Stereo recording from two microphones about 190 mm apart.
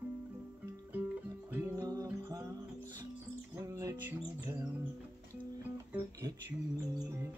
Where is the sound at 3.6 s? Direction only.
15° right (ahead or behind).